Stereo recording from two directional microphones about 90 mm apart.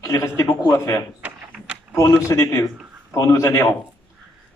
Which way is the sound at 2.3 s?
35° left (ahead or behind).